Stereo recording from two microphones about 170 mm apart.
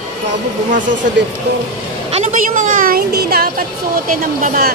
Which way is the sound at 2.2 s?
50° right (ahead or behind).